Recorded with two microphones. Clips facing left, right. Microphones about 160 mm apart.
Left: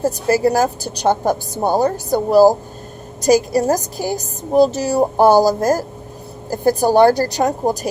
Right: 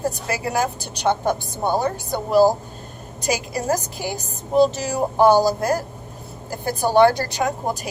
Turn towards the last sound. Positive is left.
turn(degrees=40)  # may be behind; listen again after turning